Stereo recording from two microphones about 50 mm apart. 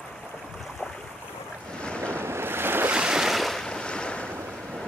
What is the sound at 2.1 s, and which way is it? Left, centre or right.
Waves, right.